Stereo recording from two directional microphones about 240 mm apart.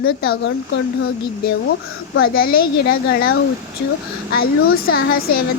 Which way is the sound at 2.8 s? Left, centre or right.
Left.